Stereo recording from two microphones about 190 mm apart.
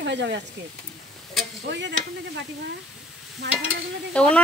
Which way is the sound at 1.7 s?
65° right (ahead or behind).